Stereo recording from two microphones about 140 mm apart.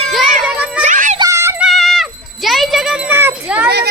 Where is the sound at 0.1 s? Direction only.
5° right (ahead or behind).